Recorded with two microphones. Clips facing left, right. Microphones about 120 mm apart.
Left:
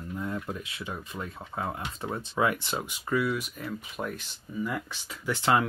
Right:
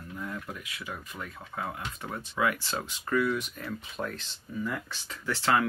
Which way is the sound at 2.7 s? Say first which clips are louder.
Even; 10° left (ahead or behind).